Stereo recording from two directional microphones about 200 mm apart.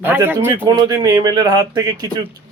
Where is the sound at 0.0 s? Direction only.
10° right (ahead or behind).